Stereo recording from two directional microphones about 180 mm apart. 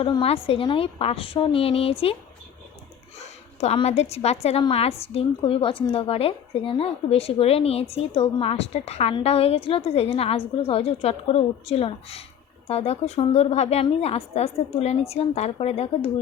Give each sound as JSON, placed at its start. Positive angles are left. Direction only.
{"t": 0.0, "sound": "a woman's voice", "side_deg": 30}
{"t": 3.6, "sound": "a woman's voice", "side_deg": 35}